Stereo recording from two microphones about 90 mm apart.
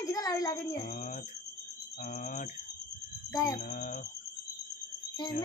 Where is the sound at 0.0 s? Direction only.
40° left (ahead or behind).